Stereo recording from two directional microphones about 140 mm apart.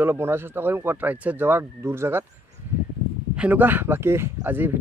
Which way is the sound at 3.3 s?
10° right (ahead or behind).